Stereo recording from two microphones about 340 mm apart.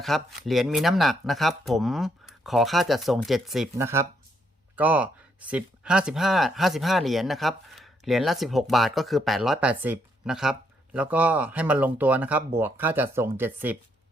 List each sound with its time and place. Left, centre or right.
0.0 s speech: centre